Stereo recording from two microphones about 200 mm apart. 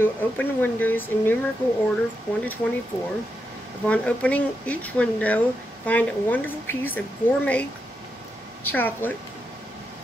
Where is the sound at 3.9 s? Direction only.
5° left (ahead or behind).